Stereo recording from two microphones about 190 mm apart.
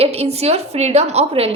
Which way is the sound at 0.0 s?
35° right (ahead or behind).